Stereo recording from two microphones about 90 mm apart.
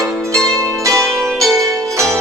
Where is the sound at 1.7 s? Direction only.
35° right (ahead or behind).